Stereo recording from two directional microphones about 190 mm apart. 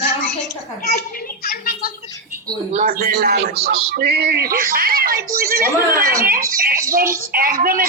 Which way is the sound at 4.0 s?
55° right (ahead or behind).